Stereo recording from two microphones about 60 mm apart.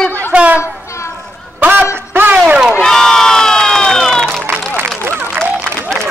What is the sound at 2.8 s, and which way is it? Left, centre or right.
Crowd, centre.